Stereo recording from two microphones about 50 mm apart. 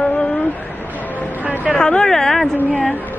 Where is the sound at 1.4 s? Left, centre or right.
Right.